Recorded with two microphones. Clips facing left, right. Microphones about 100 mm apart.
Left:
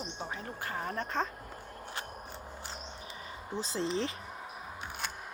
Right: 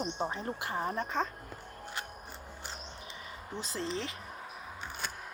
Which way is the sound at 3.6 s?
30° left (ahead or behind).